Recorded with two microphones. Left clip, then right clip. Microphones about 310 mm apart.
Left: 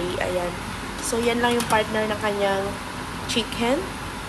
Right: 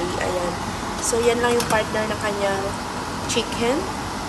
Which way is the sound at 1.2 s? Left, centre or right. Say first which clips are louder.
Right 2 dB; centre.